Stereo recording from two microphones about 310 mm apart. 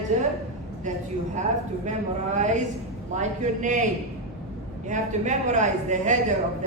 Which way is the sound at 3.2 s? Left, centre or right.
Right.